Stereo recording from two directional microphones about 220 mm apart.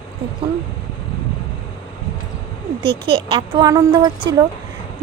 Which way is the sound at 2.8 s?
25° right (ahead or behind).